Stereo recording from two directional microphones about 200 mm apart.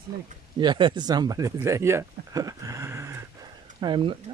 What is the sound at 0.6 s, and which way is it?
Speech, 25° right (ahead or behind).